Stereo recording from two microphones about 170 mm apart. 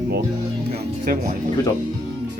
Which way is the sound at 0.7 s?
55° right (ahead or behind).